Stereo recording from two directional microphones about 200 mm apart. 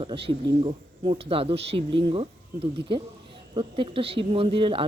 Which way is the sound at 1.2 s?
30° right (ahead or behind).